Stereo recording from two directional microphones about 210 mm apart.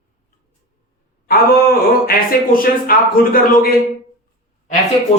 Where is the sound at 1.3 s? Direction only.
45° left (ahead or behind).